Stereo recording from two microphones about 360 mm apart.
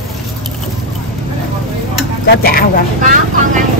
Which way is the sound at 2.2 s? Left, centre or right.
Left.